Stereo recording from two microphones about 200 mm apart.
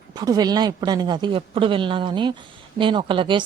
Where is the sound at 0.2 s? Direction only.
20° right (ahead or behind).